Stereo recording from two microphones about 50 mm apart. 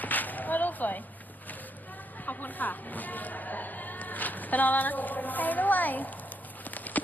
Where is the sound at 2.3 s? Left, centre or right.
Left.